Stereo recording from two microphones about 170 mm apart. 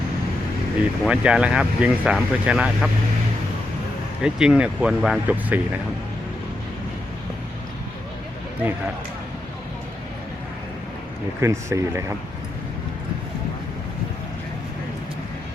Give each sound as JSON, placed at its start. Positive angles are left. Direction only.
{"t": 1.0, "sound": "speech", "side_deg": -5}
{"t": 4.2, "sound": "speech", "side_deg": -5}
{"t": 11.3, "sound": "speech", "side_deg": -15}